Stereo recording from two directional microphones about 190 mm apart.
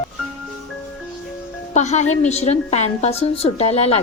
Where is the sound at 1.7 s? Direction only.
35° left (ahead or behind).